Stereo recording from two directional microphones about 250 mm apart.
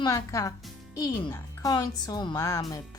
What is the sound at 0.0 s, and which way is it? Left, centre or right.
Speech, centre.